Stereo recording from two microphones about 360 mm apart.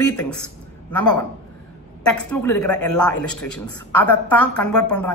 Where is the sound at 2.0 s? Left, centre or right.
Centre.